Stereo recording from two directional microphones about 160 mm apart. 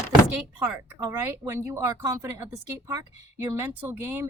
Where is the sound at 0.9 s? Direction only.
15° right (ahead or behind).